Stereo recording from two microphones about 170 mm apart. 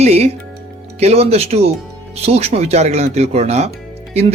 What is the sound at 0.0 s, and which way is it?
Music, 40° right (ahead or behind).